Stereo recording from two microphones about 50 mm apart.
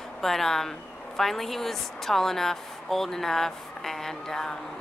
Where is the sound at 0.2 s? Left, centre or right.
Centre.